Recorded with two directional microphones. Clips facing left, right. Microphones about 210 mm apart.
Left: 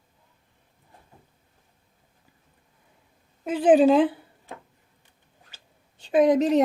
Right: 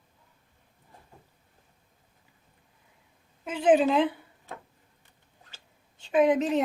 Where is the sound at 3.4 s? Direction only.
35° left (ahead or behind).